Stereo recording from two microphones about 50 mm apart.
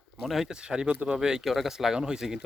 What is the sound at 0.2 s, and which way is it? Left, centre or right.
Speech, centre.